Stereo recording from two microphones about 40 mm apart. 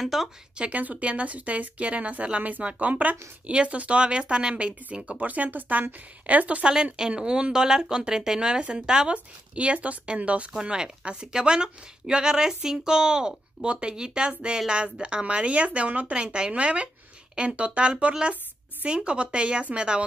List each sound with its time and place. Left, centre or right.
0.0 s speech: centre
0.6 s a woman's voice: right
5.2 s speech: right
6.6 s a woman's voice: right
9.1 s speech: right
10.5 s a woman's voice: centre